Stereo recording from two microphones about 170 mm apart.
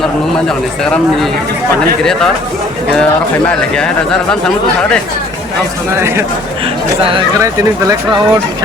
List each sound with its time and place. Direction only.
0.4 s speech: 5° left (ahead or behind)
3.0 s speech: 5° left (ahead or behind)
6.0 s speech: 15° right (ahead or behind)
7.3 s speech: 20° right (ahead or behind)